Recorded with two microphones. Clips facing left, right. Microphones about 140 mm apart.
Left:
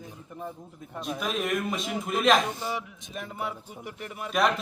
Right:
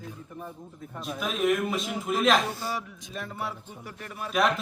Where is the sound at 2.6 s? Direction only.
20° left (ahead or behind).